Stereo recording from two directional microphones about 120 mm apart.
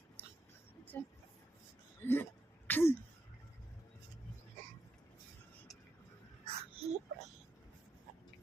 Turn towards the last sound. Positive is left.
turn(degrees=-60)  # may be behind; listen again after turning